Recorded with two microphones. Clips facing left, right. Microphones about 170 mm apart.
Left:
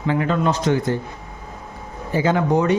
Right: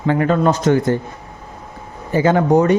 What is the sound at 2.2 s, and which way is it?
Speech, 50° right (ahead or behind).